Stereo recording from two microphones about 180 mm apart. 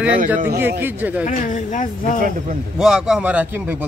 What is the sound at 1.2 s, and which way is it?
Speech, 45° left (ahead or behind).